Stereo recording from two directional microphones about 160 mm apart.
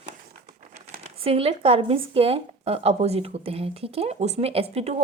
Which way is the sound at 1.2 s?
40° right (ahead or behind).